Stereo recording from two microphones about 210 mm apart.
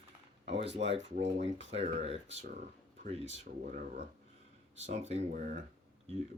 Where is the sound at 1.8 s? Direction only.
30° right (ahead or behind).